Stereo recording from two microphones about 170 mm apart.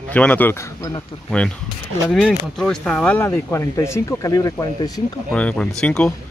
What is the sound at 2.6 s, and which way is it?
Speech, 5° left (ahead or behind).